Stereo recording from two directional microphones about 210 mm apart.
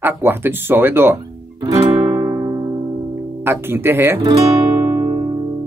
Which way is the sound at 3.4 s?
10° right (ahead or behind).